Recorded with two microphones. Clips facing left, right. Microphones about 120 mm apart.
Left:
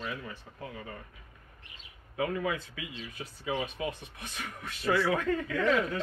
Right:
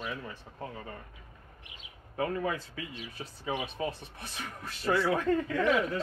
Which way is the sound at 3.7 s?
35° right (ahead or behind).